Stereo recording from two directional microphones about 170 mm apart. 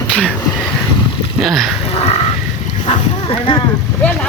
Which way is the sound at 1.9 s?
35° left (ahead or behind).